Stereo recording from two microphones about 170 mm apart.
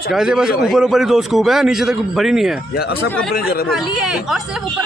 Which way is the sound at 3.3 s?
60° left (ahead or behind).